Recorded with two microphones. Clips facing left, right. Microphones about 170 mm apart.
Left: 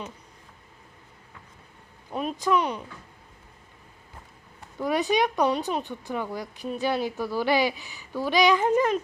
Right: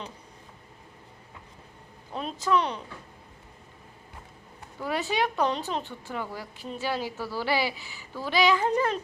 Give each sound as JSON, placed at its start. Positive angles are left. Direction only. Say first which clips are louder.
{"t": 2.1, "sound": "speech", "louder": "left 2 dB", "side_deg": 10}
{"t": 4.8, "sound": "speech", "louder": "left 4 dB", "side_deg": 15}